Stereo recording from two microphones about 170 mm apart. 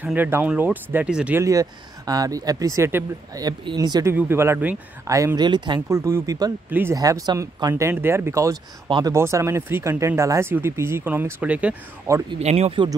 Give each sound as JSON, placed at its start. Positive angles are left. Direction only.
{"t": 0.0, "sound": "speech", "side_deg": -10}
{"t": 1.4, "sound": "speech", "side_deg": -20}
{"t": 4.1, "sound": "speech", "side_deg": -15}
{"t": 12.3, "sound": "speech", "side_deg": -40}